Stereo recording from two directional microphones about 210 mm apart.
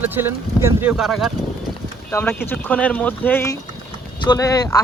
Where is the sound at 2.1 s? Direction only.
10° left (ahead or behind).